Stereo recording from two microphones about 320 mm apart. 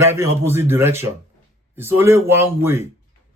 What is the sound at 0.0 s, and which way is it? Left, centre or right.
Speech, centre.